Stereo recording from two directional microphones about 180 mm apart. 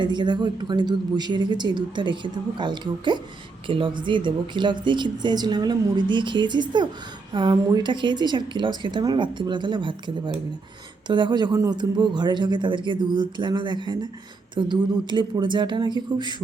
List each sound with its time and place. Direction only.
0.0 s a woman's voice: 25° right (ahead or behind)